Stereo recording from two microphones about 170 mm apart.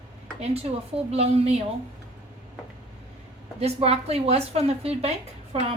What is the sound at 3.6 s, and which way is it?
A woman's voice, 40° right (ahead or behind).